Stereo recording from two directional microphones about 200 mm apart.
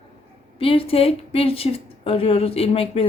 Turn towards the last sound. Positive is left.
turn(degrees=30)  # may be behind; listen again after turning